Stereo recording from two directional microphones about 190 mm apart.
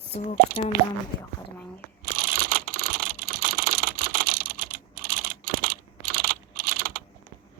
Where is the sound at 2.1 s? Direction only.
50° right (ahead or behind).